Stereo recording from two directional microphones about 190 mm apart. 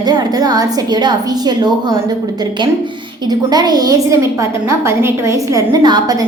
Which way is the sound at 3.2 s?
20° right (ahead or behind).